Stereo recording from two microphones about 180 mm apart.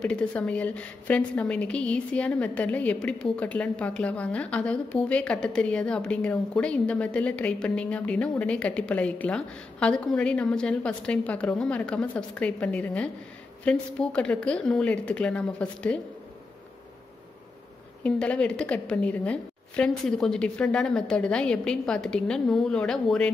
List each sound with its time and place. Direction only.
0.0 s a woman's voice: 5° left (ahead or behind)
18.0 s a woman's voice: 5° left (ahead or behind)